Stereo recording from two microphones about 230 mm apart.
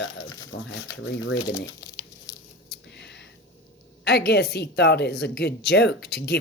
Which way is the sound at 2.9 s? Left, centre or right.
Left.